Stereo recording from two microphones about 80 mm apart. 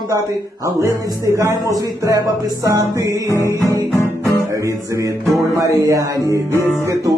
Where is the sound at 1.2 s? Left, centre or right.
Right.